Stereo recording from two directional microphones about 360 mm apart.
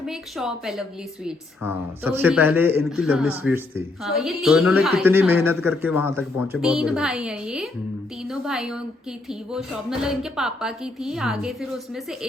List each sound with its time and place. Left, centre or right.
0.0 s a woman's voice: centre